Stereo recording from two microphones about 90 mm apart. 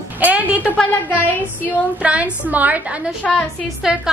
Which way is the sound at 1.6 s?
15° right (ahead or behind).